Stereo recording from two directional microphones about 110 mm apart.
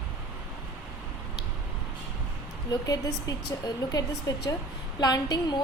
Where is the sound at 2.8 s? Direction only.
35° left (ahead or behind).